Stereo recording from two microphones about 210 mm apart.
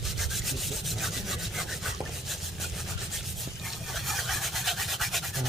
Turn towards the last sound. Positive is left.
turn(degrees=0)  # may be behind; listen again after turning